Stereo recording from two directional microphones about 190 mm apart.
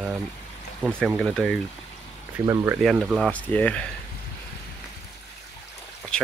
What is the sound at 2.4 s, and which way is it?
Speech, 15° right (ahead or behind).